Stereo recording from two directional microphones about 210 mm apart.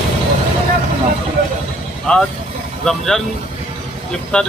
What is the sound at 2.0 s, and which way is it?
Speech, 5° left (ahead or behind).